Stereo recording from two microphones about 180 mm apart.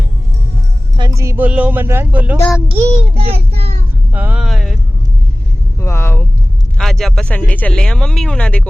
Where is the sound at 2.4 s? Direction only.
10° left (ahead or behind).